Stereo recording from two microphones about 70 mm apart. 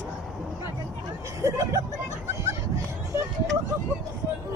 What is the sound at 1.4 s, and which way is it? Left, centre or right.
Speech, right.